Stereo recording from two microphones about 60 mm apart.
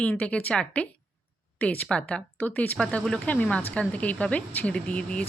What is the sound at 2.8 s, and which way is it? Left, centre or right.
Speech, centre.